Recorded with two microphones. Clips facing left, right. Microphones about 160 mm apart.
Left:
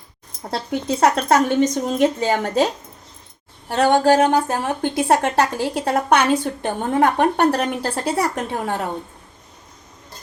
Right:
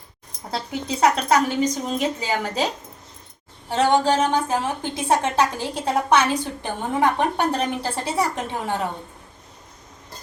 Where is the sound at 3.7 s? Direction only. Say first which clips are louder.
Left 3 dB; 65° left (ahead or behind).